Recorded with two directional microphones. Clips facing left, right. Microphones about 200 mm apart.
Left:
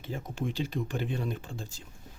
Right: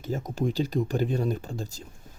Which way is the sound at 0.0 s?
40° right (ahead or behind).